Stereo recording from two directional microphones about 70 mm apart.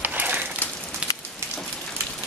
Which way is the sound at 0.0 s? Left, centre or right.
Right.